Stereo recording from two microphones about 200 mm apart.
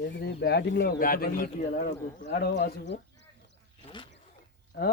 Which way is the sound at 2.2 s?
55° left (ahead or behind).